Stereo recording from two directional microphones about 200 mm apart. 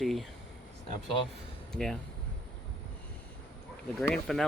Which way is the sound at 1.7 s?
Centre (ahead or behind).